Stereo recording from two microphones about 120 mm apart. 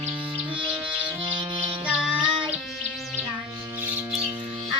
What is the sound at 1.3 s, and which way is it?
Music, 45° right (ahead or behind).